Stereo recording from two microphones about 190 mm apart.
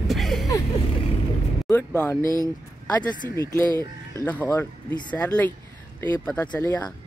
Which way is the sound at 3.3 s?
15° left (ahead or behind).